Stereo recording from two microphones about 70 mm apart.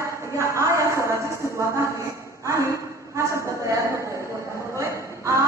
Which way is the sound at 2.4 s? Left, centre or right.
Right.